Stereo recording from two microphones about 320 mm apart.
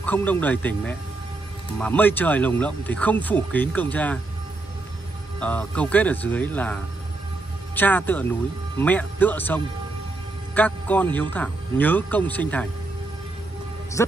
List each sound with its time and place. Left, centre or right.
0.0 s speech: centre
5.4 s speech: centre
14.0 s a man's voice: centre